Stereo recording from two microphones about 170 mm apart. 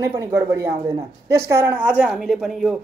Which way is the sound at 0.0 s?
15° right (ahead or behind).